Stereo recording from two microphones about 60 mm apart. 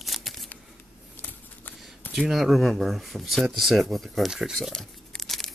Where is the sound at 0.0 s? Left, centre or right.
Centre.